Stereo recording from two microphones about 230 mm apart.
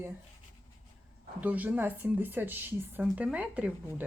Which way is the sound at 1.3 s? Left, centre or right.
Centre.